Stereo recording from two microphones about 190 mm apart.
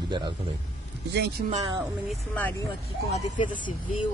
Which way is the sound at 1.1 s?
60° right (ahead or behind).